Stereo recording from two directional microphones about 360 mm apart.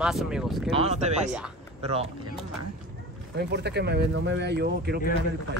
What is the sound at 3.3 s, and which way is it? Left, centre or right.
Speech, right.